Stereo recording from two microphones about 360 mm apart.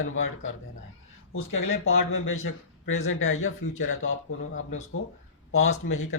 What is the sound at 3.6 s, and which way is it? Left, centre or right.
Speech, centre.